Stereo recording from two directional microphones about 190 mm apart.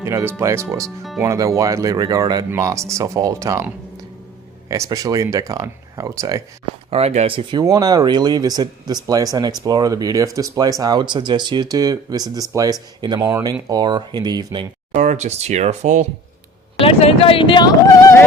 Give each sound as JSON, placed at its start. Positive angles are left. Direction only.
{"t": 0.0, "sound": "speech", "side_deg": -15}
{"t": 4.7, "sound": "speech", "side_deg": -20}
{"t": 6.9, "sound": "speech", "side_deg": -35}
{"t": 14.9, "sound": "speech", "side_deg": -40}
{"t": 16.8, "sound": "speech", "side_deg": 30}